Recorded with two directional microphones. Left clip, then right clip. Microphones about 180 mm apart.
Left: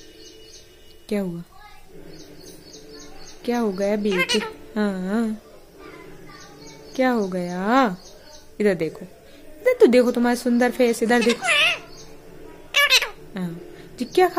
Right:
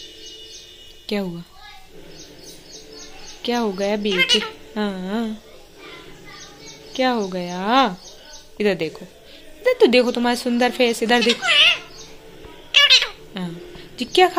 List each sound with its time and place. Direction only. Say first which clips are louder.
1.0 s a woman's voice: right 1 dB; 15° left (ahead or behind)
3.4 s speech: right 1 dB; 15° left (ahead or behind)
4.1 s a woman's voice: right 4 dB; 30° left (ahead or behind)
6.9 s a woman's voice: right 1 dB; 25° left (ahead or behind)
11.3 s a sound: right 4 dB; 30° left (ahead or behind)
12.7 s cat: right 4 dB; 30° left (ahead or behind)
13.4 s a sound: right 1 dB; 20° left (ahead or behind)